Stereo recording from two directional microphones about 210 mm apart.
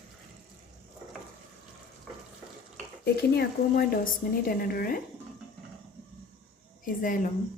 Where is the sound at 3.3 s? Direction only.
50° left (ahead or behind).